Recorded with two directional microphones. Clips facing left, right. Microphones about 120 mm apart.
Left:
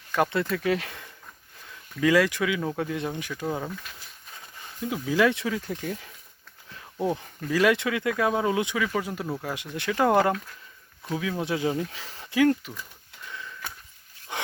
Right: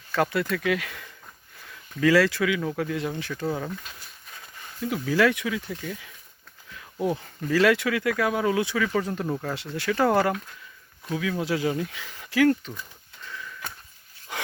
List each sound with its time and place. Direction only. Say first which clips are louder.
0.1 s speech: even; 20° left (ahead or behind)
2.0 s speech: right 1 dB; 15° left (ahead or behind)
5.5 s speech: left 1 dB; 40° left (ahead or behind)
6.7 s a sound: right 1 dB; 30° left (ahead or behind)
7.5 s speech: right 1 dB; 20° left (ahead or behind)
12.3 s speech: right 1 dB; 20° left (ahead or behind)
13.2 s sniff: right 1 dB; 25° left (ahead or behind)
14.3 s wild animals: left 1 dB; 25° left (ahead or behind)